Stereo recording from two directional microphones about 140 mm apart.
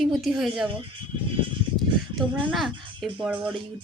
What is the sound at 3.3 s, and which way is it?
Speech, 35° right (ahead or behind).